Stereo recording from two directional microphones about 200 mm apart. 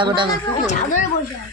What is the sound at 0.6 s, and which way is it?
Speech, 40° left (ahead or behind).